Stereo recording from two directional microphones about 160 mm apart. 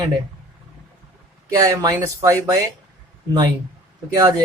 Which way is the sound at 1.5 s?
20° right (ahead or behind).